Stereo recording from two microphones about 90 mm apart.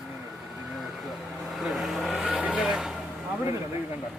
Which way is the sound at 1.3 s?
Centre (ahead or behind).